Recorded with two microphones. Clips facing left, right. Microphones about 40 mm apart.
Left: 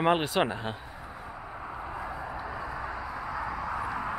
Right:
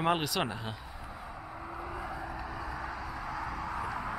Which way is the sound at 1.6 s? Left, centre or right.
Centre.